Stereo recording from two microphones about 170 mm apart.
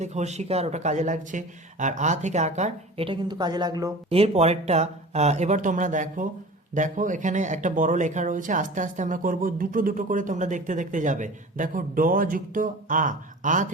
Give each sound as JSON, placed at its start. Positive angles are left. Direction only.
{"t": 0.0, "sound": "speech", "side_deg": -40}
{"t": 3.1, "sound": "a woman's voice", "side_deg": -25}
{"t": 4.1, "sound": "speech", "side_deg": -35}